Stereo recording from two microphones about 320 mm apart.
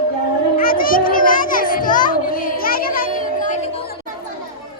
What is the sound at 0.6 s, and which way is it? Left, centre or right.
Children playing, left.